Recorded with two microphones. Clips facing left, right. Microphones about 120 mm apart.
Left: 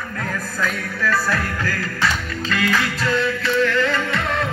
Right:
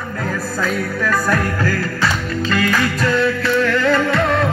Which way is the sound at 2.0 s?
45° right (ahead or behind).